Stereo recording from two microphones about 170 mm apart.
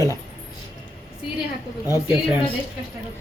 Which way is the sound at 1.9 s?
10° right (ahead or behind).